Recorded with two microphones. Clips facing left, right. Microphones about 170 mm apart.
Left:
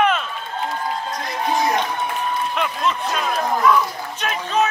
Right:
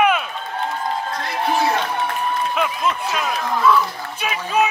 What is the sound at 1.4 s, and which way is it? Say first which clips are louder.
Music: right 1 dB; 15° left (ahead or behind).